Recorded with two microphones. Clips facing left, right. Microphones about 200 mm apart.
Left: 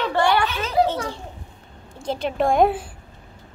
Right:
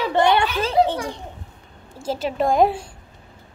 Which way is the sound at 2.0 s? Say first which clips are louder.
Even; 5° right (ahead or behind).